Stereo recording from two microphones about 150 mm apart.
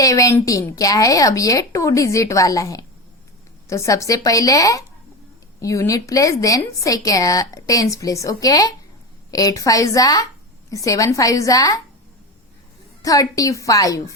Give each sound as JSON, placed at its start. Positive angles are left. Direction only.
{"t": 0.0, "sound": "a woman's voice", "side_deg": 20}
{"t": 13.0, "sound": "a woman's voice", "side_deg": 25}